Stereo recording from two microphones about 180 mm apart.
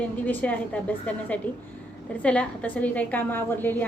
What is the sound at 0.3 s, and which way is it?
A woman's voice, 10° left (ahead or behind).